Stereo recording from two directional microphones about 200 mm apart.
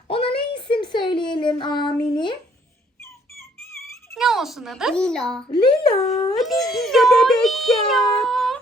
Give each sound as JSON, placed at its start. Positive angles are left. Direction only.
{"t": 0.1, "sound": "a sound", "side_deg": 25}
{"t": 4.1, "sound": "a child's voice", "side_deg": 0}
{"t": 5.5, "sound": "speech", "side_deg": 25}
{"t": 6.3, "sound": "speech", "side_deg": 0}